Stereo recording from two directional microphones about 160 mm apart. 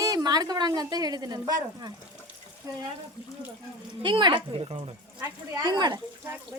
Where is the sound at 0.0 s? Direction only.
25° right (ahead or behind).